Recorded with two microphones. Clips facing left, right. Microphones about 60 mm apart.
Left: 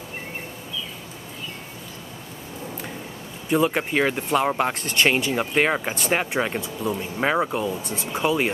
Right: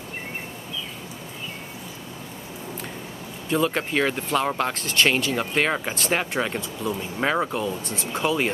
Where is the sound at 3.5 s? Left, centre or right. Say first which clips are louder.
Left 2 dB; centre.